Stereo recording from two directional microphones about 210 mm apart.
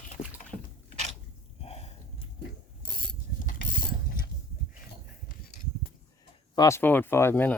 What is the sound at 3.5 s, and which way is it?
Pulleys, 40° left (ahead or behind).